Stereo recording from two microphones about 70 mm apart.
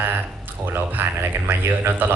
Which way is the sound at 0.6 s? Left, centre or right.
Right.